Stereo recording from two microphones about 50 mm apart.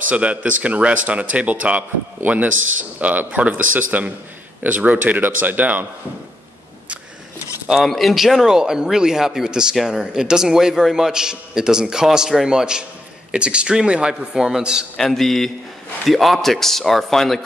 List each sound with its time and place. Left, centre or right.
0.1 s a man's voice: right
7.8 s a man's voice: centre
15.0 s a man's voice: centre